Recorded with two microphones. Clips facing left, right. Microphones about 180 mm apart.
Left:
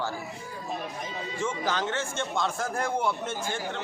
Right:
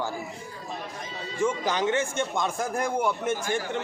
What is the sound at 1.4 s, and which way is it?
A man's voice, 15° right (ahead or behind).